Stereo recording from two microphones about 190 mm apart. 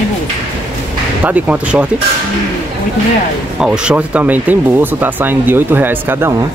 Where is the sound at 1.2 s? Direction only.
10° right (ahead or behind).